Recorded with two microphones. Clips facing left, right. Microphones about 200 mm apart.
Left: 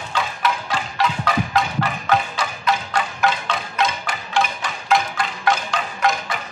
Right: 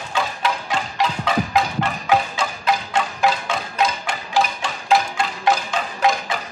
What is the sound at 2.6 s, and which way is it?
Music, 30° right (ahead or behind).